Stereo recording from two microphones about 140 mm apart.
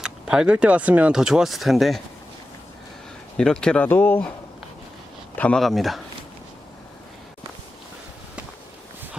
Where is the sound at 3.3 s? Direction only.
5° left (ahead or behind).